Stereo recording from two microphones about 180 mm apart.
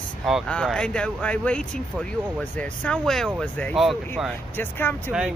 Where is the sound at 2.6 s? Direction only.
5° left (ahead or behind).